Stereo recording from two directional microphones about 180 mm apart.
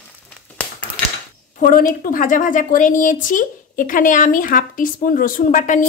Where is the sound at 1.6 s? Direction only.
50° left (ahead or behind).